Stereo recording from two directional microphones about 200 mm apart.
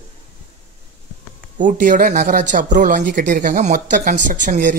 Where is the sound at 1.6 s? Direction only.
40° right (ahead or behind).